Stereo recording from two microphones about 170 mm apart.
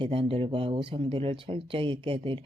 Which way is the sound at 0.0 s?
30° right (ahead or behind).